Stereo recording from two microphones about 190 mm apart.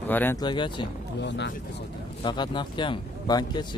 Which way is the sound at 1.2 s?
65° left (ahead or behind).